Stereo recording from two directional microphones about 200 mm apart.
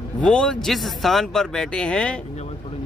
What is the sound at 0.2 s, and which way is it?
Speech, 5° left (ahead or behind).